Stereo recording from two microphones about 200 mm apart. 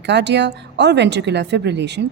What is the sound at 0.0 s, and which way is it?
Speech, 60° right (ahead or behind).